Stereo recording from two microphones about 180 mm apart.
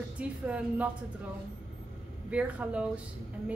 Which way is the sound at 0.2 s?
5° right (ahead or behind).